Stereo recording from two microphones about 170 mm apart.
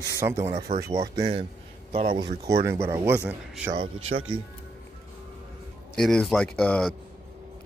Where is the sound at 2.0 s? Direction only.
35° right (ahead or behind).